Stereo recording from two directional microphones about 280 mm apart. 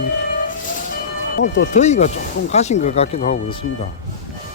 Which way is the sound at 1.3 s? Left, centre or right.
Left.